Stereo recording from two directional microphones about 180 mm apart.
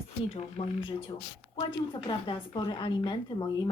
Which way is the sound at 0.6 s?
30° left (ahead or behind).